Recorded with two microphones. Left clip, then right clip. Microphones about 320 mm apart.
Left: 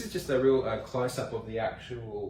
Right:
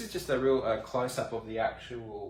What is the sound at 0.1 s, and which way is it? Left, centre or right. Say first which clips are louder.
Speech: left 2 dB; centre.